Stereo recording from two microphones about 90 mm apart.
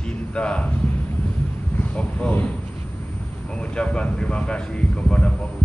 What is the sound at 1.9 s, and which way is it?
Speech, 15° left (ahead or behind).